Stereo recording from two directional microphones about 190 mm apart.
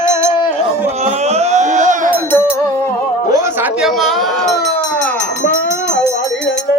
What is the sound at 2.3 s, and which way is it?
Music, 10° left (ahead or behind).